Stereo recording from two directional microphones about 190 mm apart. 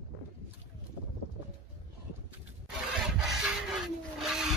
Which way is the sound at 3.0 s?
5° right (ahead or behind).